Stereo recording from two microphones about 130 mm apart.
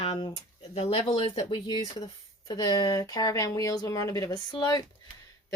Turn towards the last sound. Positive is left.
turn(degrees=35)  # may be behind; listen again after turning